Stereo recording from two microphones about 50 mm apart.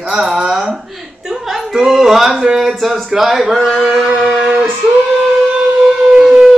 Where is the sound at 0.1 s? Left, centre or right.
Centre.